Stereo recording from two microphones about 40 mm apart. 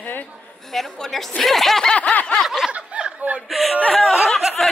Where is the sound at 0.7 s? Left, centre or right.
Centre.